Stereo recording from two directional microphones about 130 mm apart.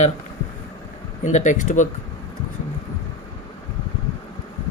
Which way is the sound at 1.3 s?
65° left (ahead or behind).